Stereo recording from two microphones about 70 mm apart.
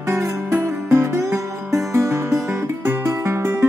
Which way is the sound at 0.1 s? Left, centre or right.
Right.